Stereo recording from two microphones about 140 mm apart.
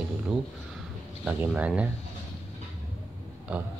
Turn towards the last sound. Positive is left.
turn(degrees=-10)  # may be behind; listen again after turning